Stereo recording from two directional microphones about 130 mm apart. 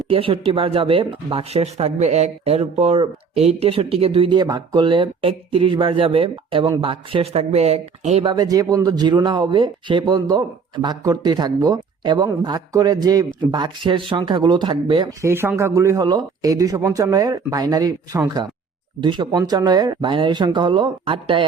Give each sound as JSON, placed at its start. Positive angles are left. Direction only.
{"t": 0.1, "sound": "speech", "side_deg": -45}
{"t": 8.3, "sound": "speech", "side_deg": -30}
{"t": 15.2, "sound": "speech", "side_deg": -20}